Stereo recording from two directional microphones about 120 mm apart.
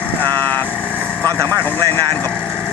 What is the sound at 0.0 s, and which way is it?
Vehicle, 15° left (ahead or behind).